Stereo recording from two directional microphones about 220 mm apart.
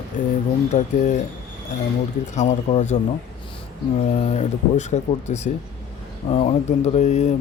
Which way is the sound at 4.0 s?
30° left (ahead or behind).